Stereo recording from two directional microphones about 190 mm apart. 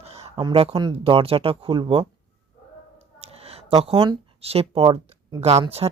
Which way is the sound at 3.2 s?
30° right (ahead or behind).